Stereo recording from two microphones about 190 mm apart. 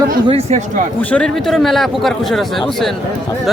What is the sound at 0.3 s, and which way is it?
Speech, 35° right (ahead or behind).